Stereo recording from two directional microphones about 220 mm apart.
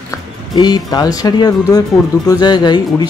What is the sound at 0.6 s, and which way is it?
Speech, 20° left (ahead or behind).